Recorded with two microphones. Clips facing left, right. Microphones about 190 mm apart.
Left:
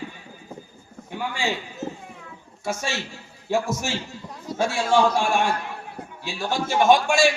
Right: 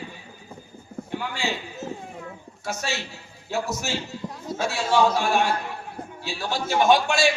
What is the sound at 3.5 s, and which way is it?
A man's voice, 50° left (ahead or behind).